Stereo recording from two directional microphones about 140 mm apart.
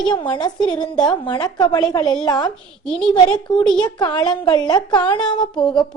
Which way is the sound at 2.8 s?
5° left (ahead or behind).